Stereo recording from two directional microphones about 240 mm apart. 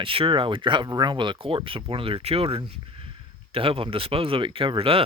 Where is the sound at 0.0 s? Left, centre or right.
Right.